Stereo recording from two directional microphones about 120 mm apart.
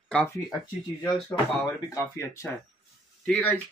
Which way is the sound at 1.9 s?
25° left (ahead or behind).